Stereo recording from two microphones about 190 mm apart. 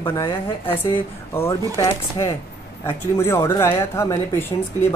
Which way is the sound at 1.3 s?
15° left (ahead or behind).